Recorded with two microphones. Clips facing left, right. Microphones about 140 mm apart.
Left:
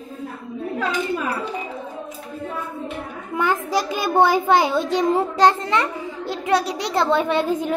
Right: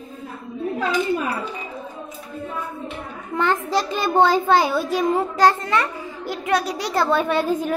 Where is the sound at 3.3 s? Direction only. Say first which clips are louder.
Even; 10° left (ahead or behind).